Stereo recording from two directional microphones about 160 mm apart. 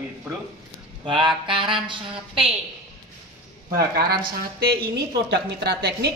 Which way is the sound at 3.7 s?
70° right (ahead or behind).